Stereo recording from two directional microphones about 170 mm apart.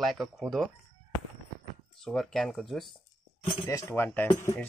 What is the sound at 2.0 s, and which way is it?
Speech, centre (ahead or behind).